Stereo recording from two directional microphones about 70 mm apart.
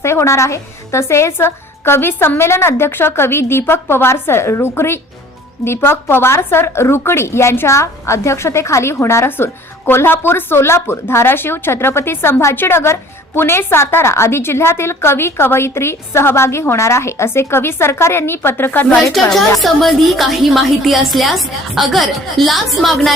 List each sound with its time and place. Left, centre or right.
0.0 s a woman's voice: left
19.3 s a woman's voice: centre